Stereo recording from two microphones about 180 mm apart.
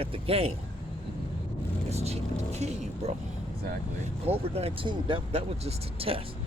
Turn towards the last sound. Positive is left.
turn(degrees=-30)  # may be behind; listen again after turning